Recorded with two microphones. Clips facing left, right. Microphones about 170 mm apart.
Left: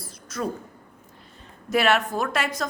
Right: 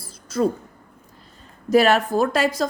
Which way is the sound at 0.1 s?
30° right (ahead or behind).